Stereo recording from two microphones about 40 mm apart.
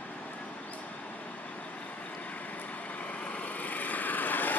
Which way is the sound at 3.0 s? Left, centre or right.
Left.